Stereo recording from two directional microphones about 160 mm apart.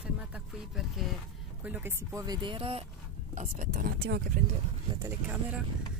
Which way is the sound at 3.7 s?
85° right.